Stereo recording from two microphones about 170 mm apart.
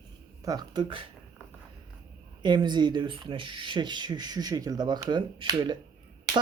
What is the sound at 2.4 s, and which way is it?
Speech, 25° right (ahead or behind).